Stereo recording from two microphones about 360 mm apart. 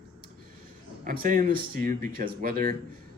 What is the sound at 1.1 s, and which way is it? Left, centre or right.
Speech, right.